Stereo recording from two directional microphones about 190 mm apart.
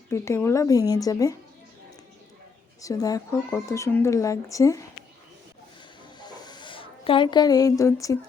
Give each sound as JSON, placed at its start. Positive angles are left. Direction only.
{"t": 0.1, "sound": "speech", "side_deg": 15}
{"t": 2.8, "sound": "speech", "side_deg": 20}
{"t": 6.1, "sound": "a sound", "side_deg": 20}